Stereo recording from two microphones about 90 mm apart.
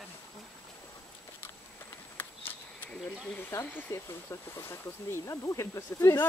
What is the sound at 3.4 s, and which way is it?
Speech, 30° left (ahead or behind).